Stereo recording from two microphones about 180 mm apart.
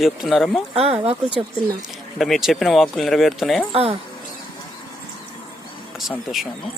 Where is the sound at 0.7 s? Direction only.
35° right (ahead or behind).